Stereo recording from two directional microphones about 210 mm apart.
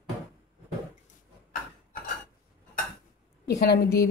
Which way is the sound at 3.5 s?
50° left (ahead or behind).